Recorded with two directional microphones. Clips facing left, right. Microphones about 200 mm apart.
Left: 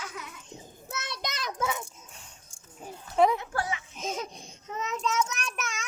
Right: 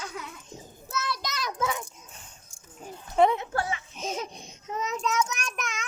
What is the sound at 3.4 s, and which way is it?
Speech, 25° right (ahead or behind).